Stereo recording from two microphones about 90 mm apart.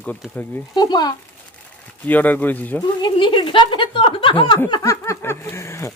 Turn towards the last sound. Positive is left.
turn(degrees=30)  # may be behind; listen again after turning